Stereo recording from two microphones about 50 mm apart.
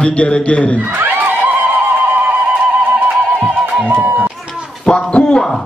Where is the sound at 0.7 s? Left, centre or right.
Right.